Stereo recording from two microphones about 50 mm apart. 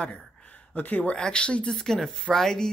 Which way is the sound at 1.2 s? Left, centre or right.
Centre.